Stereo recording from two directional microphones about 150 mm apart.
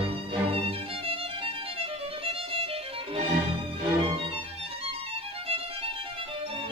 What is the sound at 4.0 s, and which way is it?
Music, 40° right (ahead or behind).